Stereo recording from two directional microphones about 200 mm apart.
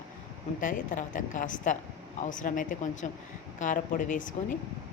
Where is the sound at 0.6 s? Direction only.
40° left (ahead or behind).